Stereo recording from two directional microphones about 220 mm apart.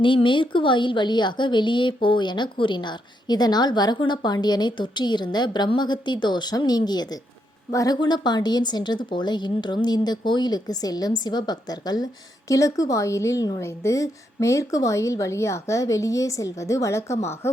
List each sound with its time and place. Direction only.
0.0 s a woman's voice: 20° left (ahead or behind)